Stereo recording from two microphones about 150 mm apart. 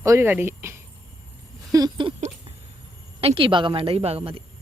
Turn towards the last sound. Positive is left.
turn(degrees=-40)  # may be behind; listen again after turning